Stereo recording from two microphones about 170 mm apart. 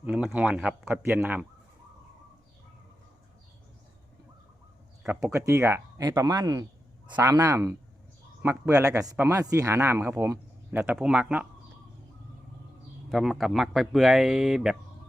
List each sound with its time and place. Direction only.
0.0 s speech: 5° right (ahead or behind)
5.2 s speech: 15° right (ahead or behind)
13.1 s speech: centre (ahead or behind)